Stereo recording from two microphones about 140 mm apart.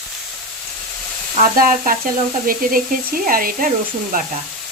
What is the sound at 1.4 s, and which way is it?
Sizzle, 75° right (ahead or behind).